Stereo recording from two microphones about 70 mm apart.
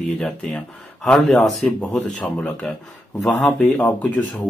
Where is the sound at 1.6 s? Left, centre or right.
Centre.